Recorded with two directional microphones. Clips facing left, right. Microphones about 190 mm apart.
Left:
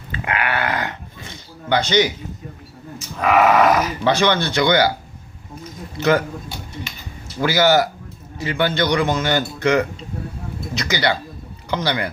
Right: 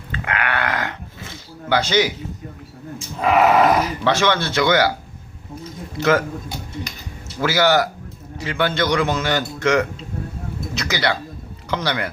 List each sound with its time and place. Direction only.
0.1 s a sound: 10° left (ahead or behind)
3.2 s speech: 30° right (ahead or behind)
4.0 s a man's voice: centre (ahead or behind)
6.0 s a man's voice: centre (ahead or behind)
7.4 s a man's voice: centre (ahead or behind)